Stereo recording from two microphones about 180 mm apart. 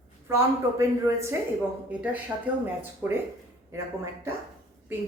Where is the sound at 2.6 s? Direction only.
10° right (ahead or behind).